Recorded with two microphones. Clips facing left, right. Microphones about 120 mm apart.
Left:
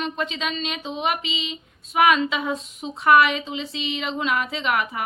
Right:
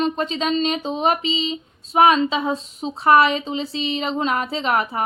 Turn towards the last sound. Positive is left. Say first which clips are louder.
# right 3 dB
turn(degrees=-35)  # may be behind; listen again after turning